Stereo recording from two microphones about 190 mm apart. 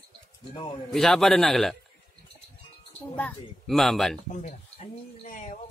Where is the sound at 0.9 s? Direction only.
Centre (ahead or behind).